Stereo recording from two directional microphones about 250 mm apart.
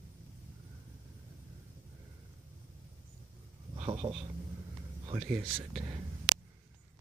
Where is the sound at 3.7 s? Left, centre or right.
Right.